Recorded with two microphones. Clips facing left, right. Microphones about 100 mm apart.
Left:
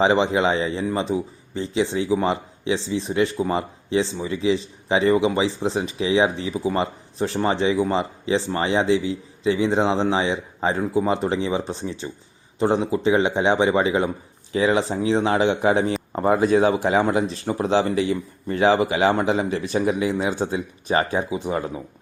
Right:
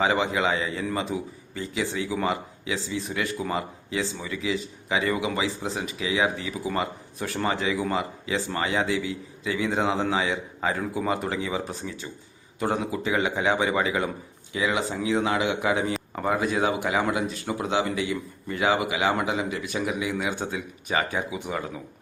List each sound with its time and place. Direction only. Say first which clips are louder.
0.0 s a man's voice: left 5 dB; 25° left (ahead or behind)